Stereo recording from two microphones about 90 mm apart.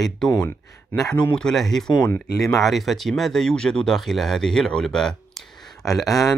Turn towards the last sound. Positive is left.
turn(degrees=0)  # may be behind; listen again after turning